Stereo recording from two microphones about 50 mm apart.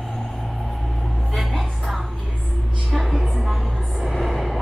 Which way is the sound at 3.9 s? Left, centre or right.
Centre.